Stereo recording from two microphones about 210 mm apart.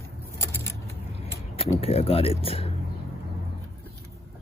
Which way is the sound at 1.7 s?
25° left (ahead or behind).